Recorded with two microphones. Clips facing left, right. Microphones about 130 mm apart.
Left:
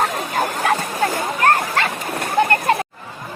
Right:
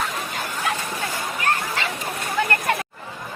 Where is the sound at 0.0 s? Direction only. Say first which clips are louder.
Left 8 dB; 45° left (ahead or behind).